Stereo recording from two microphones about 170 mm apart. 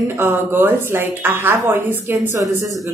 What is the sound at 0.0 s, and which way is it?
Speech, 10° right (ahead or behind).